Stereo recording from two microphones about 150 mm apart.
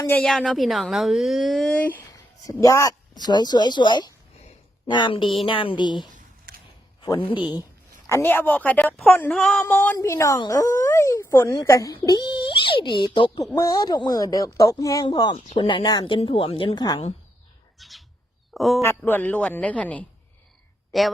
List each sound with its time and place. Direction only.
0.0 s a woman's voice: 10° left (ahead or behind)
2.5 s speech: 25° left (ahead or behind)
6.1 s a sound: 70° right (ahead or behind)
7.0 s speech: 30° left (ahead or behind)
8.0 s a woman's voice: 15° left (ahead or behind)
17.7 s bird: centre (ahead or behind)
18.5 s speech: centre (ahead or behind)
18.8 s a woman's voice: 15° left (ahead or behind); by 21.1 s centre (ahead or behind)